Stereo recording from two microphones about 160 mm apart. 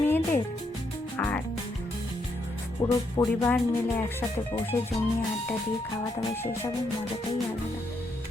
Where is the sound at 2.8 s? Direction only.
20° left (ahead or behind).